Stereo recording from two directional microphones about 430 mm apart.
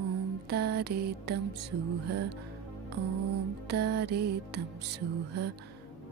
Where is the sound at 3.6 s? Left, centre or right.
Right.